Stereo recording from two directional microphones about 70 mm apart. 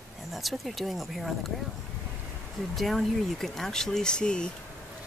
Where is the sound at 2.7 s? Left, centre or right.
Centre.